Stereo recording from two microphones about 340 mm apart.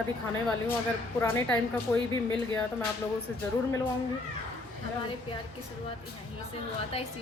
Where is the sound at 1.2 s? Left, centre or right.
Centre.